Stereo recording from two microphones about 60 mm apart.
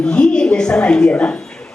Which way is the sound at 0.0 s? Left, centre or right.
Centre.